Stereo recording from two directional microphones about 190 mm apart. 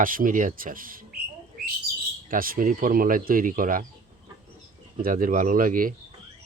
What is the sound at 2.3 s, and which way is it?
Speech, 50° right (ahead or behind).